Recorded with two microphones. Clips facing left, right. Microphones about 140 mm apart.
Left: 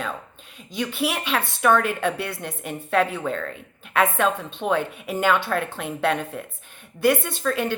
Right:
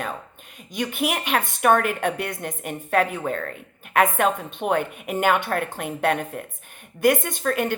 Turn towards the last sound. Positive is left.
turn(degrees=-50)  # may be behind; listen again after turning